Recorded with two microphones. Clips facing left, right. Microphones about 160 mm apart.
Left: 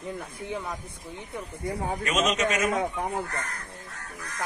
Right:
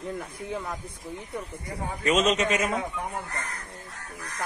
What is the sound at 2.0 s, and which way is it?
Speech, 30° right (ahead or behind).